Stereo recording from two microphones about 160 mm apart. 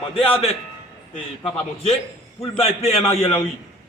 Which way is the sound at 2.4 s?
40° left (ahead or behind).